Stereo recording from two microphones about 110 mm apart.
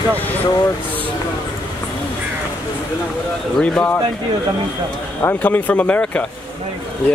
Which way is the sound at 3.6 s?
10° left (ahead or behind).